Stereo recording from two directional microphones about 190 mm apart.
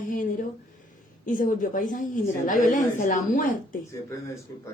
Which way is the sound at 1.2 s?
45° left (ahead or behind).